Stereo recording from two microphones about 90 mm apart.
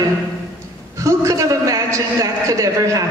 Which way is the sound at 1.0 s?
35° right (ahead or behind).